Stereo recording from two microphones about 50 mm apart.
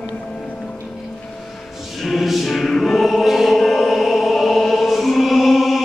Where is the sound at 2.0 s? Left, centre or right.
Centre.